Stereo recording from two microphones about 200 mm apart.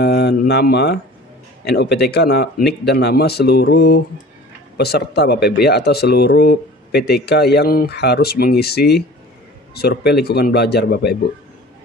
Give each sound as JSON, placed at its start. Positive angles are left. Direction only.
{"t": 0.0, "sound": "speech", "side_deg": 55}